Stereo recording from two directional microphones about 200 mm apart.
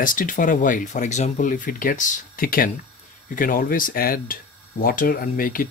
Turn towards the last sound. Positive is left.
turn(degrees=45)  # may be behind; listen again after turning